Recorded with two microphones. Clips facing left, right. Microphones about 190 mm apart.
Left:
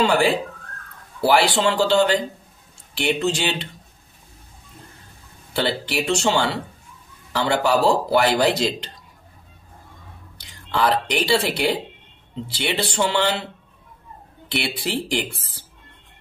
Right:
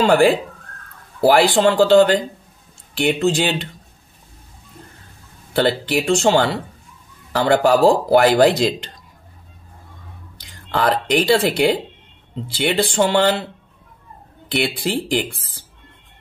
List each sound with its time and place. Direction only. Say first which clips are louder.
0.0 s speech: right 5 dB; 50° right (ahead or behind)
5.5 s speech: right 6 dB; 50° right (ahead or behind)
10.7 s speech: right 3 dB; 50° right (ahead or behind)
14.5 s speech: right 5 dB; 50° right (ahead or behind)